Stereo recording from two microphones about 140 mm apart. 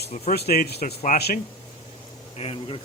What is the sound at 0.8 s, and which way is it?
Speech, 65° left (ahead or behind).